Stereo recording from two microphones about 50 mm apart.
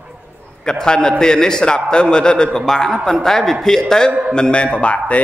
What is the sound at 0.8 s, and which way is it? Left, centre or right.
A man's voice, centre.